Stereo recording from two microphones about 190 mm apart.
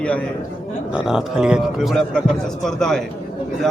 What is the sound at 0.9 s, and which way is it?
A man's voice, 5° right (ahead or behind).